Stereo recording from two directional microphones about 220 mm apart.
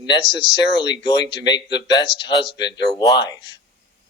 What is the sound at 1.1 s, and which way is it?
Speech, 50° left (ahead or behind).